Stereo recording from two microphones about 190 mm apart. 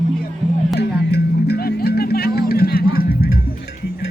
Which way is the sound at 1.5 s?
55° left (ahead or behind).